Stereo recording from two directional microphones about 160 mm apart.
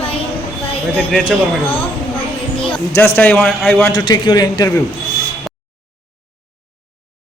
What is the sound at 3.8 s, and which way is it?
Speech, 25° left (ahead or behind).